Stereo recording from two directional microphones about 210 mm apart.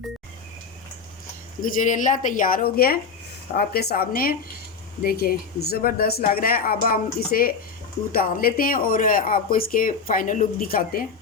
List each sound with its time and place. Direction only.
1.6 s speech: 35° left (ahead or behind)